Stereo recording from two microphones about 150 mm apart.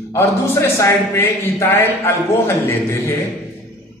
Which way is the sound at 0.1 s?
15° left (ahead or behind).